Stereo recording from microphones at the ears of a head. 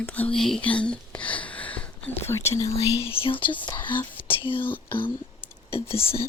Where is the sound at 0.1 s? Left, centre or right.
Centre.